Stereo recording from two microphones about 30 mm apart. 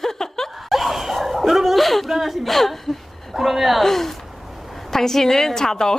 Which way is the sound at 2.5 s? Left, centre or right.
Centre.